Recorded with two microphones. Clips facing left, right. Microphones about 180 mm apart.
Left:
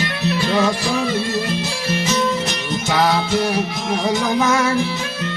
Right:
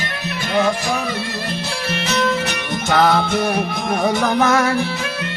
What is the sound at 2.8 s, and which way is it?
Music, 55° right (ahead or behind).